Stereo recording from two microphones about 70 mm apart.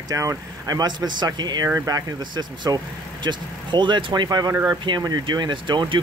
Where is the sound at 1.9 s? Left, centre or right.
Right.